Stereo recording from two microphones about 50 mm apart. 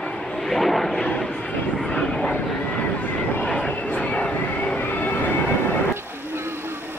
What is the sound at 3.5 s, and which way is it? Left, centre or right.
Vehicle, left.